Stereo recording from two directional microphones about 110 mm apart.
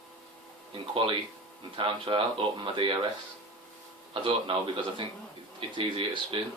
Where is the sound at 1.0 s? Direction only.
50° right (ahead or behind).